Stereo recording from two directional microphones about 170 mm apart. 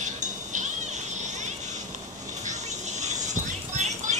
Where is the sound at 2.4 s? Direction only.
45° right (ahead or behind).